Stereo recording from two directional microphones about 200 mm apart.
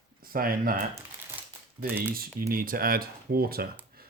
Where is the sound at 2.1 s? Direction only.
45° right (ahead or behind).